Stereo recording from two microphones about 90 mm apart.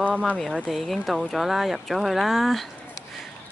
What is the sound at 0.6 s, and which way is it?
Speech, centre (ahead or behind).